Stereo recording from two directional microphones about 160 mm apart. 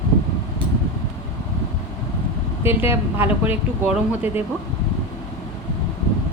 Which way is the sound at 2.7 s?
15° right (ahead or behind).